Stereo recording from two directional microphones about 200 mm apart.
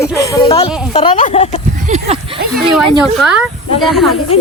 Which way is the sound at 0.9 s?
30° left (ahead or behind).